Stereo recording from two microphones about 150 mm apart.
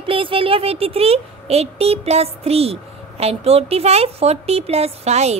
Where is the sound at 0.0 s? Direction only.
35° right (ahead or behind).